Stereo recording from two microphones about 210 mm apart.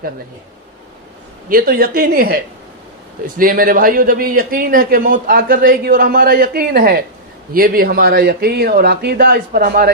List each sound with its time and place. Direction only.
1.5 s a man's voice: 45° right (ahead or behind)